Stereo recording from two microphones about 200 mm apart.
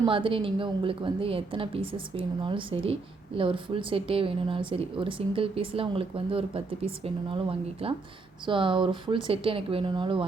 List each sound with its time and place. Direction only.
0.0 s a woman's voice: 25° right (ahead or behind)